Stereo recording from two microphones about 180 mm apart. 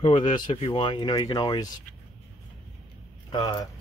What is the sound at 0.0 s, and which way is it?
Speech, 25° left (ahead or behind).